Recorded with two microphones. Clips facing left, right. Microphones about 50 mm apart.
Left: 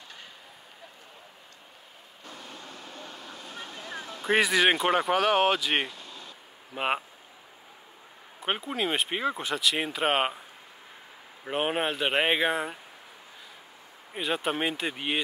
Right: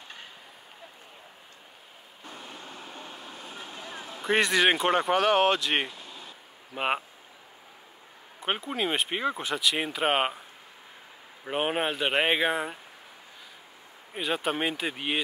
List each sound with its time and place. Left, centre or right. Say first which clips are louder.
2.2 s vehicle: right 1 dB; right
4.2 s speech: even; centre
6.7 s speech: even; centre
8.4 s speech: even; centre
11.4 s speech: even; centre
14.1 s speech: even; centre